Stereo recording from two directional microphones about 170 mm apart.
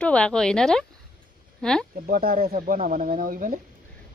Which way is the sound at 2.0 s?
60° right (ahead or behind).